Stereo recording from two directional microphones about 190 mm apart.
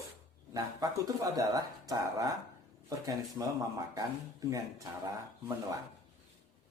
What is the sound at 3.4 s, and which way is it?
Speech, 10° right (ahead or behind).